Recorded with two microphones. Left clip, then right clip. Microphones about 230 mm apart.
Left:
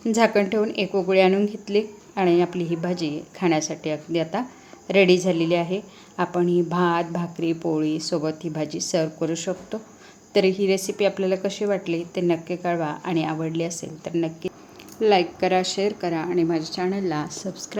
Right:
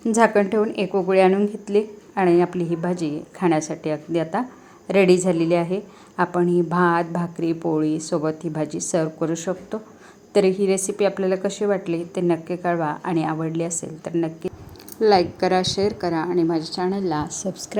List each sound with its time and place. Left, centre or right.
0.0 s a woman's voice: centre
15.4 s a woman's voice: centre
15.8 s a woman's voice: centre
17.4 s a woman's voice: centre